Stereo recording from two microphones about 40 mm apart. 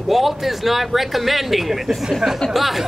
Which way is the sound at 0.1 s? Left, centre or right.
Centre.